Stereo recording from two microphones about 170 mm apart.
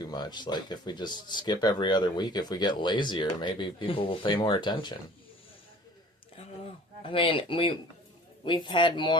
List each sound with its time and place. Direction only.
0.0 s speech: 25° left (ahead or behind)
7.0 s speech: 30° left (ahead or behind)